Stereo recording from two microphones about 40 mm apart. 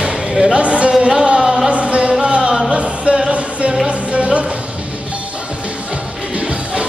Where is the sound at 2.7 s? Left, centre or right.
Right.